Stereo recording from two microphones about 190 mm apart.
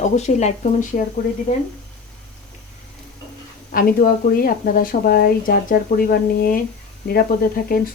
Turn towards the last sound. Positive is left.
turn(degrees=50)  # may be behind; listen again after turning